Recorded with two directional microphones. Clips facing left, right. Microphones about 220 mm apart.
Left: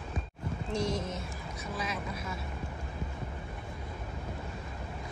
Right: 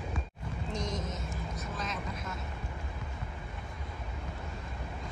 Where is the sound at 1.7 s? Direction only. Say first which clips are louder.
Left 4 dB; 10° left (ahead or behind).